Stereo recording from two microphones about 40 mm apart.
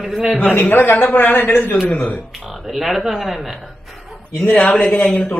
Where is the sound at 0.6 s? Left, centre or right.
Left.